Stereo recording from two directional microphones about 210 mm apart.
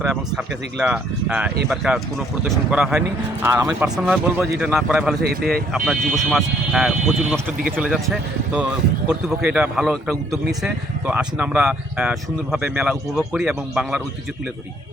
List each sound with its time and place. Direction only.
0.0 s a man's voice: centre (ahead or behind)
5.2 s speech: 45° right (ahead or behind)
5.7 s a man's voice: centre (ahead or behind)
9.0 s a man's voice: 5° right (ahead or behind)